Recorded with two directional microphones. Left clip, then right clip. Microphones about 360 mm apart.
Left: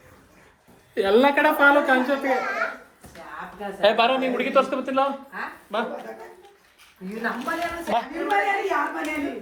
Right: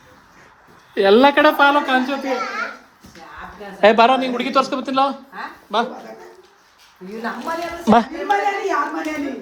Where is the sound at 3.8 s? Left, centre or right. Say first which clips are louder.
Right 7 dB; right.